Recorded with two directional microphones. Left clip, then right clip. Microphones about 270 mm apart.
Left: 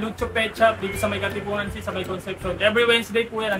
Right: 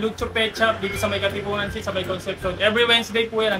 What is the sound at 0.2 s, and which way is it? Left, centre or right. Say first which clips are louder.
Speech: left 1 dB; centre.